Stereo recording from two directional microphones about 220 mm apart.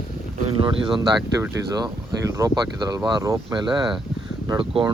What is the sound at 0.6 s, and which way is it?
Speech, 20° right (ahead or behind).